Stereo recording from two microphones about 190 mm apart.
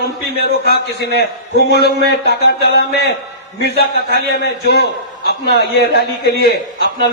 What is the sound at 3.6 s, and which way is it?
Speech, 60° right (ahead or behind).